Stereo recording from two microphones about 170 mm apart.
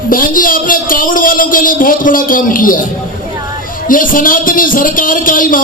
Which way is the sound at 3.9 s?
55° left (ahead or behind).